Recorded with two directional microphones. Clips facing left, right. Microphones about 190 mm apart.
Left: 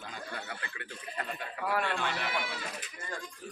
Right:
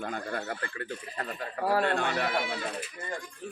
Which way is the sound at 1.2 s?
35° right (ahead or behind).